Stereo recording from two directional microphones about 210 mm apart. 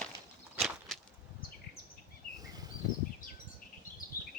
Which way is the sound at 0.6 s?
Centre (ahead or behind).